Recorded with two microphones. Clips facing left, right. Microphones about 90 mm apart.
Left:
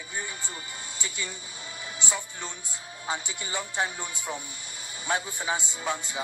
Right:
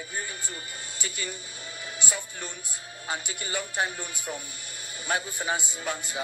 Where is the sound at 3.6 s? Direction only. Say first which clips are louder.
Even; 25° left (ahead or behind).